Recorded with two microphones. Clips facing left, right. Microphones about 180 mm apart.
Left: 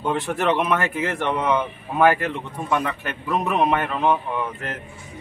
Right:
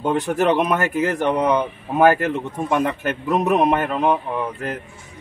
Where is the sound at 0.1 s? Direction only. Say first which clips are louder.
Right 3 dB; 40° right (ahead or behind).